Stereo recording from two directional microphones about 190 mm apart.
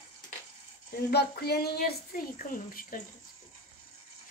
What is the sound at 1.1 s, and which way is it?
A woman's voice, 55° left (ahead or behind).